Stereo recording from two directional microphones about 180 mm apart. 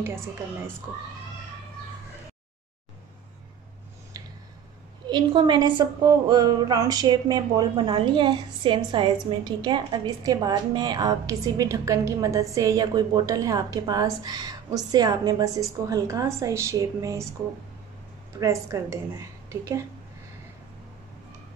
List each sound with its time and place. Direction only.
5.0 s a woman's voice: 25° right (ahead or behind)
18.4 s a woman's voice: 15° right (ahead or behind)